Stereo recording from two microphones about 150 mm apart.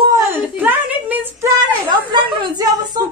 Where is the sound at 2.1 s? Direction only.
30° right (ahead or behind).